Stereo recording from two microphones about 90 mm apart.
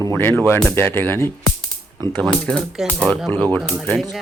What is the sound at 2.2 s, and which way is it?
Speech, 10° left (ahead or behind).